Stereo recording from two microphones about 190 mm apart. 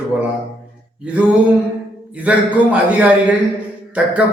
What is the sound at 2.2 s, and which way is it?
A man's voice, 10° right (ahead or behind).